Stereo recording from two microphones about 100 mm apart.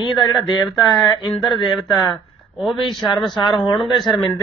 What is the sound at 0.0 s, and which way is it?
Speech, 50° left (ahead or behind).